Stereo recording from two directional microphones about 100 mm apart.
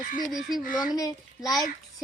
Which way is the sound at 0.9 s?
35° left (ahead or behind).